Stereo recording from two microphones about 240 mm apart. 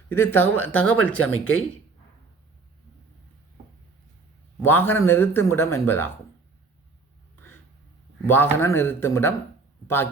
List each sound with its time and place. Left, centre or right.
0.1 s a man's voice: centre
1.2 s speech: left
4.6 s a man's voice: centre
8.3 s a man's voice: centre